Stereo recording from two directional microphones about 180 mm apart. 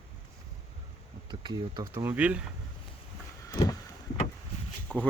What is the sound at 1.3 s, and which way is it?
Speech, 25° right (ahead or behind).